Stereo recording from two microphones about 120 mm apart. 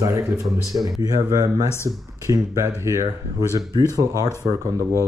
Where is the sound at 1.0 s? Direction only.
30° right (ahead or behind).